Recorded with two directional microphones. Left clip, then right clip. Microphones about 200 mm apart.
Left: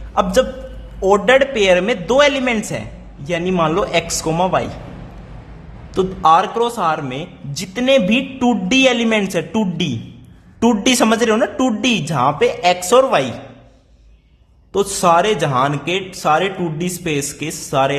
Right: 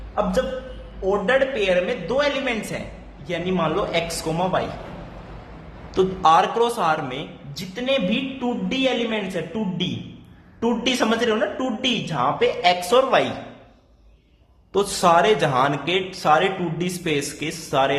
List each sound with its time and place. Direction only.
1.0 s a man's voice: 30° left (ahead or behind)
5.9 s a man's voice: 25° left (ahead or behind)
14.7 s a man's voice: 25° left (ahead or behind)